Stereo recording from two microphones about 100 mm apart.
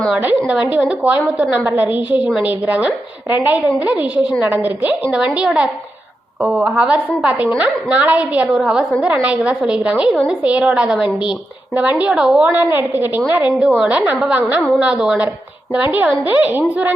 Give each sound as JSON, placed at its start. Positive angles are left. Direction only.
{"t": 0.2, "sound": "a woman's voice", "side_deg": -15}